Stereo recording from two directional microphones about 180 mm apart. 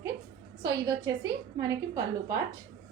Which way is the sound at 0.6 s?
20° right (ahead or behind).